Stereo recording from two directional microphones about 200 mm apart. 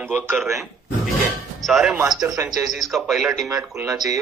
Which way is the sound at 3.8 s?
20° right (ahead or behind).